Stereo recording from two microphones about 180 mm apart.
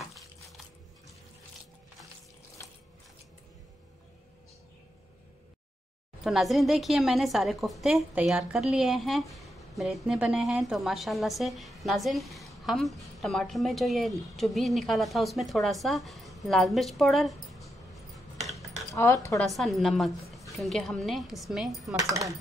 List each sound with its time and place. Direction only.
6.2 s a woman's voice: centre (ahead or behind)
21.9 s speech: 20° right (ahead or behind)